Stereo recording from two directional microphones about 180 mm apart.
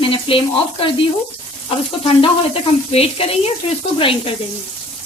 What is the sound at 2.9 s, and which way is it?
A woman's voice, 30° left (ahead or behind).